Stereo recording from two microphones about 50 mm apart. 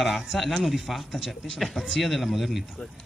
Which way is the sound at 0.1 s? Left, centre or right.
Centre.